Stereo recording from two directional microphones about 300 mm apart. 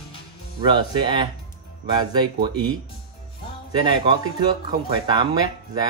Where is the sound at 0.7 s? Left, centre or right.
Centre.